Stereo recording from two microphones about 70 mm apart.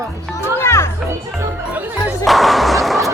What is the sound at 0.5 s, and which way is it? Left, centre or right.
Children playing, left.